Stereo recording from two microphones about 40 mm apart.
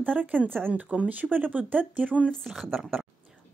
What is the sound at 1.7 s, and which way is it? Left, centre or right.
Speech, right.